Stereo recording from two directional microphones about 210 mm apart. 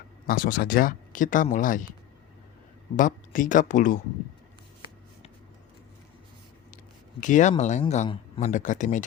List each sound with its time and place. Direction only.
0.3 s speech: 45° left (ahead or behind)
2.9 s speech: 40° left (ahead or behind)
7.2 s speech: 35° left (ahead or behind)